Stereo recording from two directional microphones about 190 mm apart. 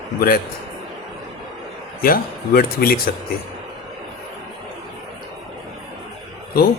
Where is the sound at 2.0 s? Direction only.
50° left (ahead or behind).